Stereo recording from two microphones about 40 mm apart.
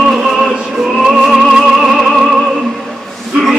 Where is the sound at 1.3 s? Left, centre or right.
Centre.